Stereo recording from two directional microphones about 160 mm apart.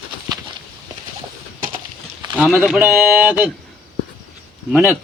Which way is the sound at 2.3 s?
10° right (ahead or behind).